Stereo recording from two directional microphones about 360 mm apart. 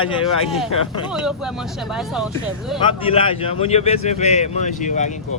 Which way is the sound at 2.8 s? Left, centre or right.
Centre.